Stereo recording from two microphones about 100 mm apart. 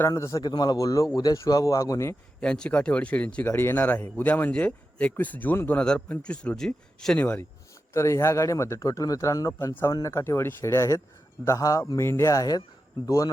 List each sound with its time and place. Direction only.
0.1 s speech: 30° left (ahead or behind)
0.4 s speech: 45° left (ahead or behind)
2.4 s speech: 10° left (ahead or behind)
7.2 s speech: 15° left (ahead or behind)
7.9 s speech: 30° left (ahead or behind)